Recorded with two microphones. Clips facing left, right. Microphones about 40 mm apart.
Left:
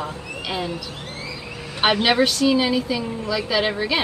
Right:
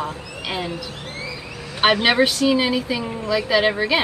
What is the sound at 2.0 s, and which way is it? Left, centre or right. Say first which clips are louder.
Speech: right 1 dB; centre.